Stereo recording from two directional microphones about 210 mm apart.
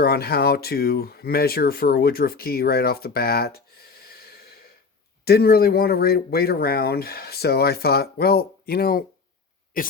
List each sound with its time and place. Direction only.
0.0 s speech: 50° left (ahead or behind)